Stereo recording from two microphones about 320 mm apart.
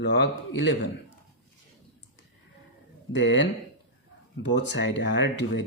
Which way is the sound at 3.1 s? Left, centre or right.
Left.